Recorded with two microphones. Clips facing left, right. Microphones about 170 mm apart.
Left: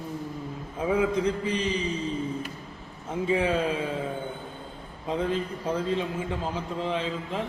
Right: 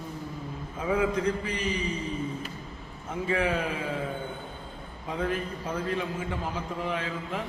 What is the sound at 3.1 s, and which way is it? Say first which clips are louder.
Speech: left 3 dB; 20° left (ahead or behind).